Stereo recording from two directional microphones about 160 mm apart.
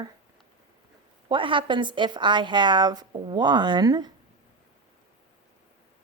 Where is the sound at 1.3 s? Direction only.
30° right (ahead or behind).